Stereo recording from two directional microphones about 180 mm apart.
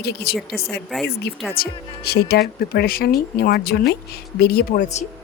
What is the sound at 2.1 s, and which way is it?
Speech, 65° left (ahead or behind).